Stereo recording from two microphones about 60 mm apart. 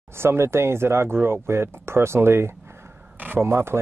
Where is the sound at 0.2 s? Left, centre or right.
Right.